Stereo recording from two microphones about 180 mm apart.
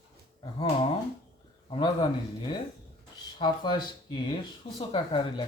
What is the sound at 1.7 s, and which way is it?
Speech, 25° left (ahead or behind).